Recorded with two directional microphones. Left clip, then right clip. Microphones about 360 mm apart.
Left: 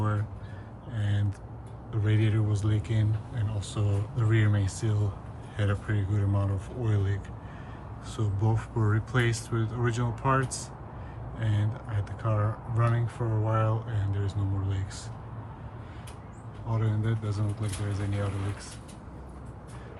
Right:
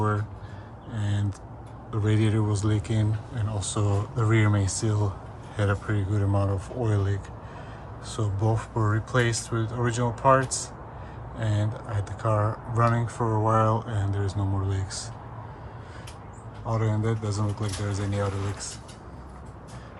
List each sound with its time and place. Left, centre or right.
0.9 s a sound: centre
1.9 s speech: centre
16.6 s speech: centre